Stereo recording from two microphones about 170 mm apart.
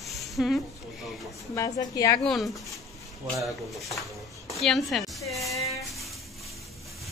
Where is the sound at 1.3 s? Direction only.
20° left (ahead or behind).